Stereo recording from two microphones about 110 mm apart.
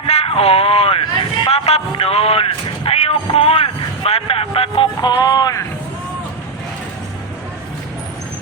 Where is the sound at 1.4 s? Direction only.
70° left (ahead or behind).